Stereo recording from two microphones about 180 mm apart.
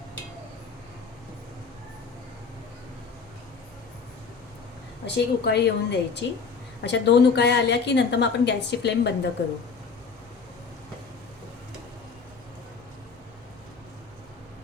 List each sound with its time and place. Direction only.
5.0 s a woman's voice: 70° left (ahead or behind)